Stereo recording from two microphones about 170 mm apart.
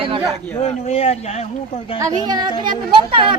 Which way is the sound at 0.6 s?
40° left (ahead or behind).